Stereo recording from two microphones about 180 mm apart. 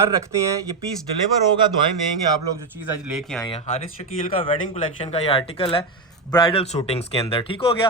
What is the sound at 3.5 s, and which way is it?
A man's voice, 35° left (ahead or behind).